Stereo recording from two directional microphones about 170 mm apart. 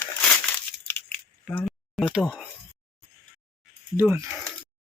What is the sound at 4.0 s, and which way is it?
Speech, 10° right (ahead or behind).